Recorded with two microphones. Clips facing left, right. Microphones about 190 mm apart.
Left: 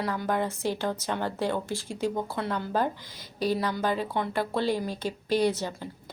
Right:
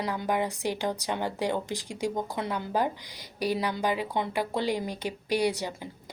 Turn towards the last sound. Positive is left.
turn(degrees=-15)  # may be behind; listen again after turning